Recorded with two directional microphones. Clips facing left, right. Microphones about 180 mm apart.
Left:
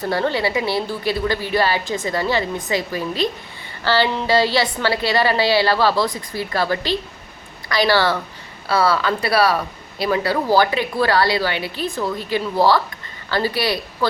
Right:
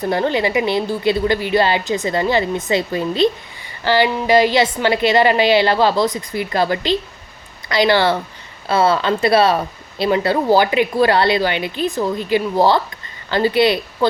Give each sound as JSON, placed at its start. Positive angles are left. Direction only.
{"t": 0.0, "sound": "a woman's voice", "side_deg": -20}